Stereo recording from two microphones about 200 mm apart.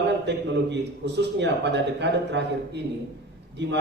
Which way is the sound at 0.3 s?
60° right (ahead or behind).